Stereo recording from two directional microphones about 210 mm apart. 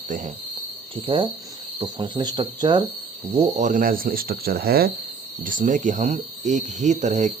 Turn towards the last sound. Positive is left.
turn(degrees=-35)  # may be behind; listen again after turning